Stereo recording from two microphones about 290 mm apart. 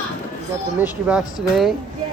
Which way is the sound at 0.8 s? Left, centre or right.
Centre.